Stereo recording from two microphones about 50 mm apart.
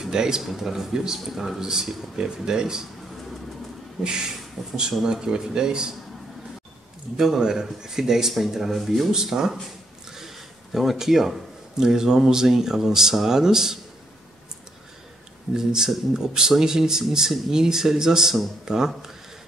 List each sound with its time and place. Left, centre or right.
0.0 s a man's voice: centre
4.0 s a man's voice: centre
7.2 s a man's voice: centre
15.5 s a man's voice: centre